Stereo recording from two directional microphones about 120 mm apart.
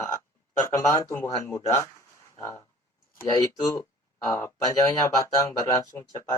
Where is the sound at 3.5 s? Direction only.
25° left (ahead or behind).